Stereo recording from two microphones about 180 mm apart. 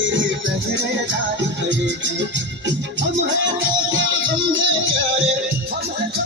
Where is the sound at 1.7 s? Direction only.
90° right.